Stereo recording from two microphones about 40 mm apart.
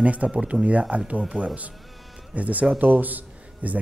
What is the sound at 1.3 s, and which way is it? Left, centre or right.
Speech, left.